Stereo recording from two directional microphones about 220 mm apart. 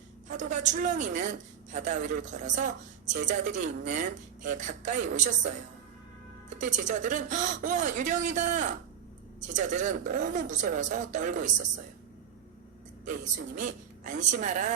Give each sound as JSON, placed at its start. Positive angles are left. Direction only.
{"t": 0.3, "sound": "a woman's voice", "side_deg": -35}
{"t": 6.6, "sound": "a woman's voice", "side_deg": -35}
{"t": 13.6, "sound": "a woman's voice", "side_deg": -35}